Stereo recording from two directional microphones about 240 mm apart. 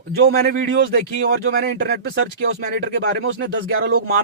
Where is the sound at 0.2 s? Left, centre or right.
Right.